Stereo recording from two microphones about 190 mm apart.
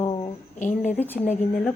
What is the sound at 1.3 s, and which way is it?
Speech, 35° left (ahead or behind).